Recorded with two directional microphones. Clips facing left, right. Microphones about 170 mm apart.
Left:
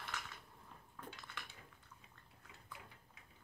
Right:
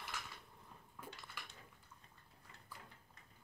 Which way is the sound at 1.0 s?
10° right (ahead or behind).